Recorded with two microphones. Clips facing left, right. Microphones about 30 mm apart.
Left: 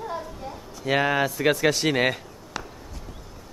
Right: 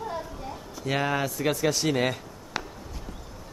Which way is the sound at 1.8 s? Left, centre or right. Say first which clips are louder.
Left 2 dB; left.